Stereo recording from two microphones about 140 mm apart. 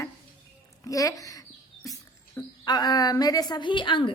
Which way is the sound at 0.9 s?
25° left (ahead or behind).